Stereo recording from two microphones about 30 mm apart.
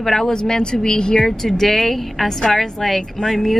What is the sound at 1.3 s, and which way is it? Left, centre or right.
A woman's voice, centre.